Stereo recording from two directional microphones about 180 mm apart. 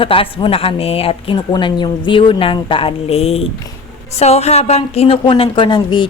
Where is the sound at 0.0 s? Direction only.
30° left (ahead or behind).